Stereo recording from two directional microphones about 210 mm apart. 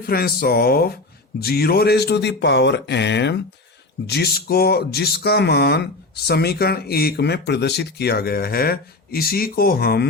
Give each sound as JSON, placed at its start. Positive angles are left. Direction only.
{"t": 0.1, "sound": "speech", "side_deg": 45}